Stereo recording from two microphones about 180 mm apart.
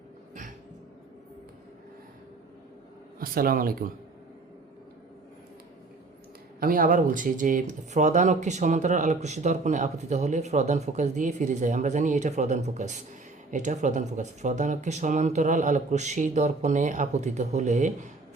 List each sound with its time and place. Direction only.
3.2 s speech: 55° right (ahead or behind)
6.6 s speech: 50° right (ahead or behind)